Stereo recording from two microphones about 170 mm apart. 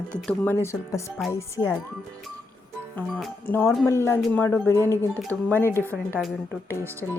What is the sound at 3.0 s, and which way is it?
Speech, 10° left (ahead or behind).